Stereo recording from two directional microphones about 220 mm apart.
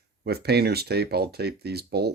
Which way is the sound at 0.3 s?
45° right (ahead or behind).